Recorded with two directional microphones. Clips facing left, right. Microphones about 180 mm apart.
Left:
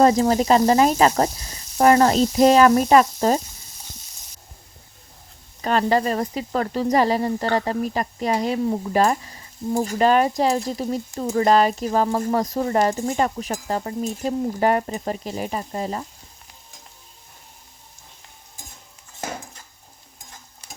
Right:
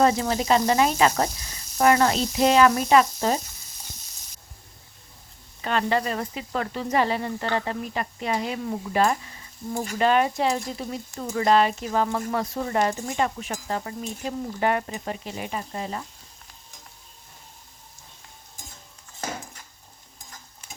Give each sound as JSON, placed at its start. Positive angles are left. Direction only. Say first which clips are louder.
{"t": 0.0, "sound": "speech", "louder": "left 5 dB", "side_deg": 35}
{"t": 5.6, "sound": "speech", "louder": "left 5 dB", "side_deg": 40}